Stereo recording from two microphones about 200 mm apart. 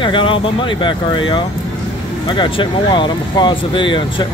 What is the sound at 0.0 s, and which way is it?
Speech, 25° left (ahead or behind).